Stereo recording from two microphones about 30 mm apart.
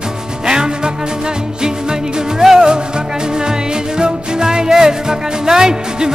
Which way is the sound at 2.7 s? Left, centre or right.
Right.